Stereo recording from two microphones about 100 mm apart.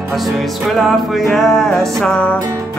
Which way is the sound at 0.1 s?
Centre (ahead or behind).